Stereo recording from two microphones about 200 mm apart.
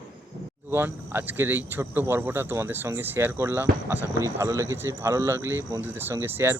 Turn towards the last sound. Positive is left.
turn(degrees=-10)  # may be behind; listen again after turning